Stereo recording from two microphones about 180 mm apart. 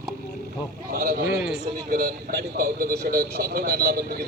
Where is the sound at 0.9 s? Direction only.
60° right (ahead or behind).